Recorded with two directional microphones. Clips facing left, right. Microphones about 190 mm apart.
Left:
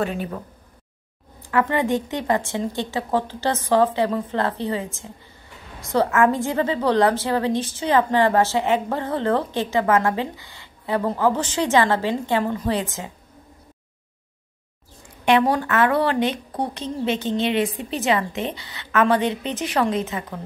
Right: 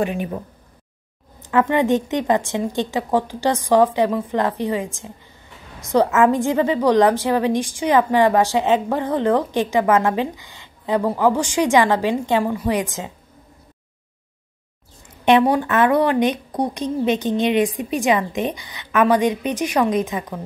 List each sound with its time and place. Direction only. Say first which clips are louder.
0.0 s a woman's voice: right 3 dB; 15° right (ahead or behind)
1.4 s a woman's voice: right 3 dB; 20° right (ahead or behind)
15.2 s a woman's voice: right 3 dB; 15° right (ahead or behind)